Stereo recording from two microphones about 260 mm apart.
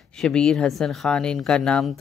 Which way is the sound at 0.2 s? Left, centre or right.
Centre.